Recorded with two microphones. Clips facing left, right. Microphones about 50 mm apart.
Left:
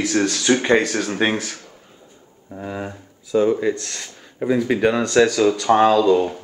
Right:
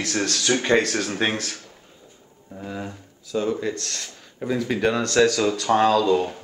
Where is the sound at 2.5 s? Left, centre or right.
Left.